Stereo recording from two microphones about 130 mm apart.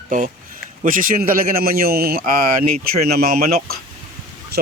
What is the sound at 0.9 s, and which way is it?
A man's voice, 90° right.